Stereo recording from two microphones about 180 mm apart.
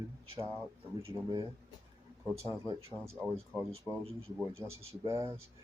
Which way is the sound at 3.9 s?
10° left (ahead or behind).